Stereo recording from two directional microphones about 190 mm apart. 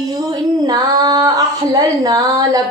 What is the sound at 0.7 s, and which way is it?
Female singing, 20° right (ahead or behind).